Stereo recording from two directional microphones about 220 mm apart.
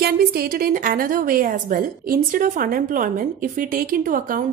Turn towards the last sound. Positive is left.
turn(degrees=-40)  # may be behind; listen again after turning